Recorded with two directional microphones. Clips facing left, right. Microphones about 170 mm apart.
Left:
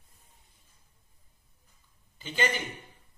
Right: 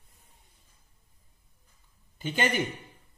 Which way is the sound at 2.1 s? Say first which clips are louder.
Right 3 dB; 55° right (ahead or behind).